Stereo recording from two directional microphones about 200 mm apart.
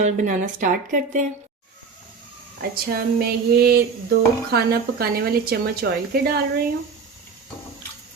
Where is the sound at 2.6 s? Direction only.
50° right (ahead or behind).